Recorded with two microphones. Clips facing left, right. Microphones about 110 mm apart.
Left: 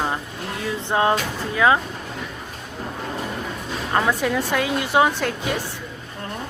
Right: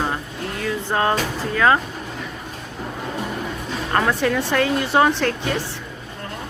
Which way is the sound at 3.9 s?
10° left (ahead or behind).